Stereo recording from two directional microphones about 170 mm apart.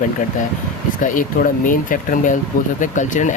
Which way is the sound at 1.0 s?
50° left (ahead or behind).